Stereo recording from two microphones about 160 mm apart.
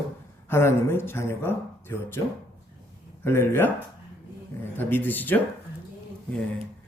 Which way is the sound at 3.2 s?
15° left (ahead or behind).